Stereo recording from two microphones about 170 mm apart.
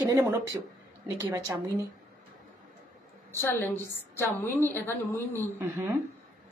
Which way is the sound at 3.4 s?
10° left (ahead or behind).